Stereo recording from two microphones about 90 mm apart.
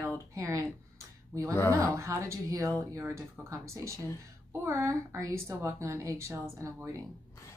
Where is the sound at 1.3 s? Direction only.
35° right (ahead or behind).